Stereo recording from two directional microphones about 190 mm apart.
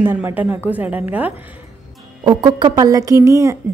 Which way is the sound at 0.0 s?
10° right (ahead or behind).